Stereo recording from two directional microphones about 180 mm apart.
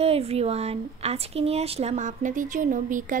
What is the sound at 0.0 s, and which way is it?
Speech, 35° right (ahead or behind).